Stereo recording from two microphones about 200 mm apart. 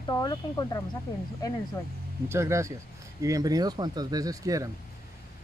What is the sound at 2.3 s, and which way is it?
Speech, 15° right (ahead or behind).